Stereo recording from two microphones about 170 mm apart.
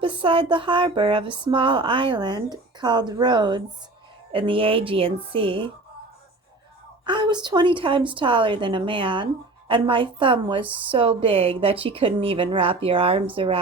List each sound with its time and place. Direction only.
0.0 s a woman's voice: 30° right (ahead or behind)
7.0 s a woman's voice: 25° right (ahead or behind)